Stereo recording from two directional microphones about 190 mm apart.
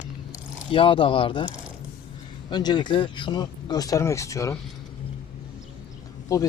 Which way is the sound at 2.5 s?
20° left (ahead or behind).